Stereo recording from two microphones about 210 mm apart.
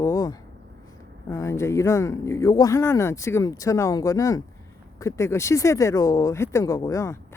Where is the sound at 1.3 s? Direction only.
15° left (ahead or behind).